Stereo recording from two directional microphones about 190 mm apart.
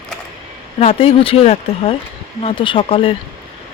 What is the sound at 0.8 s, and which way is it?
Speech, 30° left (ahead or behind).